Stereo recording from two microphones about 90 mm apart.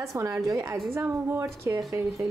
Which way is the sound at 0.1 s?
40° right (ahead or behind).